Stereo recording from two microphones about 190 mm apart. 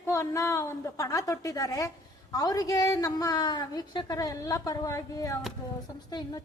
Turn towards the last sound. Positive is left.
turn(degrees=20)  # may be behind; listen again after turning